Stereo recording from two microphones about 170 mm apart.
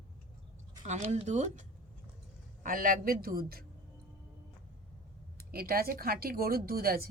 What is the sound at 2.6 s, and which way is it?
Speech, 55° right (ahead or behind).